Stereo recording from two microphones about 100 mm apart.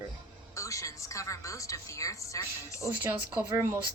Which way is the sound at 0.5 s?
30° left (ahead or behind).